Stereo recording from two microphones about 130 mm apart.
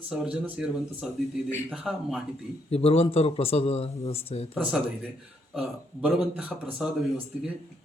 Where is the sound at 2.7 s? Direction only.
50° left (ahead or behind).